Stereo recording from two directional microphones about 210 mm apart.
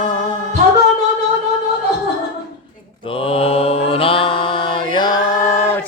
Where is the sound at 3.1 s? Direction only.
25° left (ahead or behind).